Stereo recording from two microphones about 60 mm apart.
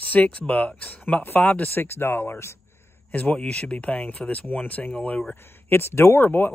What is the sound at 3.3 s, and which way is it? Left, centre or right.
Speech, centre.